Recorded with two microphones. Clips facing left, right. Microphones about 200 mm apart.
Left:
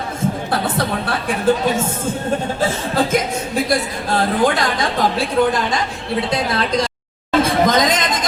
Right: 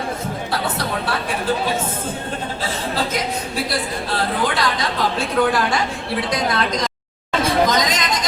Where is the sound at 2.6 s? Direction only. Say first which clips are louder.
Left 5 dB; 50° left (ahead or behind).